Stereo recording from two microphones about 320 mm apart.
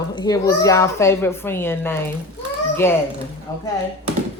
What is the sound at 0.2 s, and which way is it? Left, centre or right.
A woman's voice, centre.